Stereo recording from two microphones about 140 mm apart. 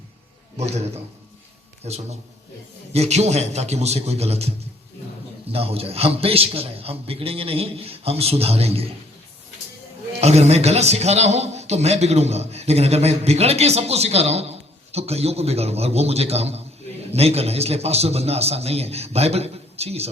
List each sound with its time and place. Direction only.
1.8 s a man's voice: 50° right (ahead or behind)
10.1 s a man's voice: 50° right (ahead or behind)